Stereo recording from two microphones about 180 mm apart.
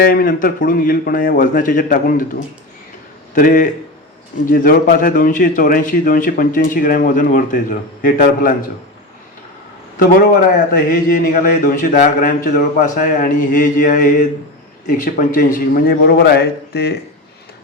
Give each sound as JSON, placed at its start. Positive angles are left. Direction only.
{"t": 0.0, "sound": "a man's voice", "side_deg": 50}
{"t": 10.7, "sound": "a man's voice", "side_deg": 50}